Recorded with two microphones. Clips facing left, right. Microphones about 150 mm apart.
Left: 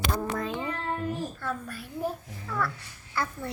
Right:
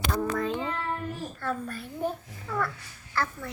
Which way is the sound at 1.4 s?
5° left (ahead or behind).